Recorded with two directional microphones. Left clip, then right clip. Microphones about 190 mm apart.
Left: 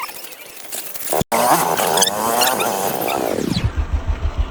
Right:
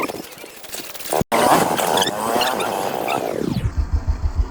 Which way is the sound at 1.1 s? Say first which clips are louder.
Even; centre (ahead or behind).